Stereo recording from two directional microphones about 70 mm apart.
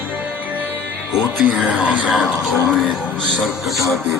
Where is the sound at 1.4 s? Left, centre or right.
Right.